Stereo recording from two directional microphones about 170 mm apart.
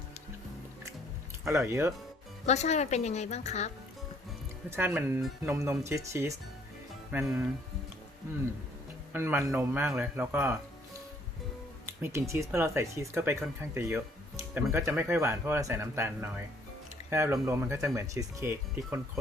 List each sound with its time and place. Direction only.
1.5 s speech: 15° right (ahead or behind)
2.5 s a woman's voice: 40° left (ahead or behind)
4.7 s speech: 10° right (ahead or behind)
9.1 s speech: 15° right (ahead or behind)
12.0 s speech: 15° right (ahead or behind)